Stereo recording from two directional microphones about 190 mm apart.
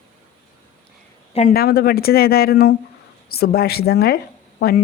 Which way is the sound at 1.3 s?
50° left (ahead or behind).